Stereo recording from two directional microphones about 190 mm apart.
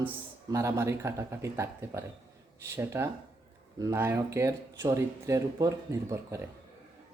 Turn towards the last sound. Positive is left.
turn(degrees=-15)  # may be behind; listen again after turning